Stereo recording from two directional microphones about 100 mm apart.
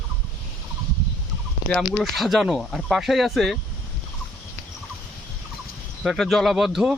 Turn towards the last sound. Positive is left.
turn(degrees=-5)  # may be behind; listen again after turning